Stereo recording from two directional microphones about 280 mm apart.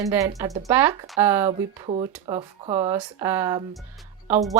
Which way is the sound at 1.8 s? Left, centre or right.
Centre.